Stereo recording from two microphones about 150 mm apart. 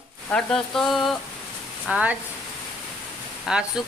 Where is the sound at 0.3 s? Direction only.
5° left (ahead or behind).